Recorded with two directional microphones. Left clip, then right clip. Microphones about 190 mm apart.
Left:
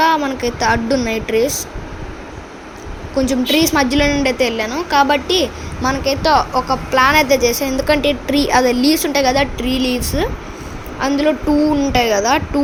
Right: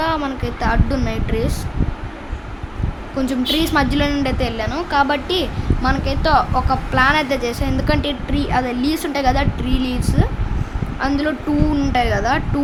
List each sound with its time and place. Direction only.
0.0 s a woman's voice: 5° left (ahead or behind)
3.2 s a woman's voice: 10° left (ahead or behind)